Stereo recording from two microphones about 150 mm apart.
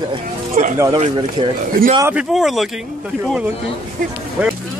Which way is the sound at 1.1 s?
35° right (ahead or behind).